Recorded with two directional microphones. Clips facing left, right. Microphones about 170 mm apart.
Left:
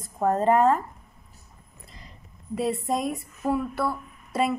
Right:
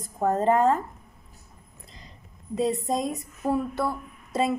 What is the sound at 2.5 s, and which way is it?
Speech, 20° right (ahead or behind).